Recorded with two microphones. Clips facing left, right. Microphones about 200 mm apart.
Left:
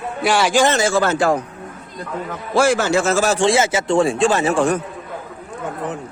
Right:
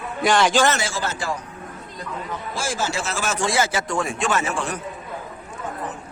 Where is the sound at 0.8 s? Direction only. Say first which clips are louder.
Left 11 dB; 60° left (ahead or behind).